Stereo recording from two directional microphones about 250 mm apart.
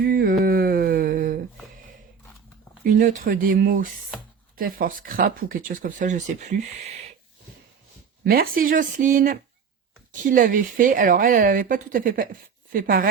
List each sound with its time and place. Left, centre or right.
0.0 s a sound: right
2.8 s speech: right
8.3 s speech: right